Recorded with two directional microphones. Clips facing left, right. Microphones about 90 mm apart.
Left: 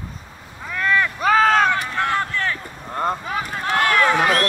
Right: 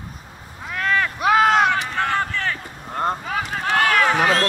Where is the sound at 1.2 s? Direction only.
10° right (ahead or behind).